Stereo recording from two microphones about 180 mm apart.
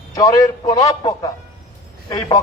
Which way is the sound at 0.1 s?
20° left (ahead or behind).